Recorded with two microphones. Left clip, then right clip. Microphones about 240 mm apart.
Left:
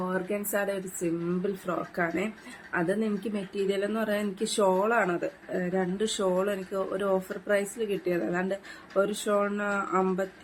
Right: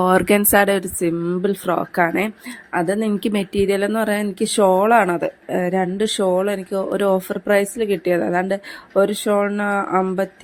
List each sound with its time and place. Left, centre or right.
0.0 s speech: right